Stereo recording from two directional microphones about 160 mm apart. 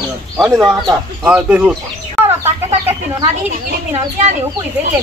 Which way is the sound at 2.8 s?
15° right (ahead or behind).